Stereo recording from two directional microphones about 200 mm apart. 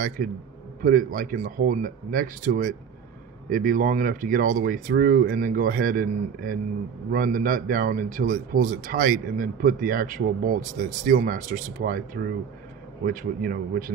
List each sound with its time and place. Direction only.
0.2 s a man's voice: 45° right (ahead or behind)